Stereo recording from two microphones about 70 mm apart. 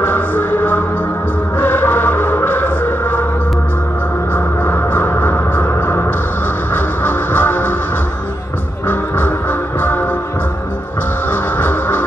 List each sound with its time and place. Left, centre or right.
0.0 s music: left
4.3 s music: left
8.8 s music: left
11.2 s music: left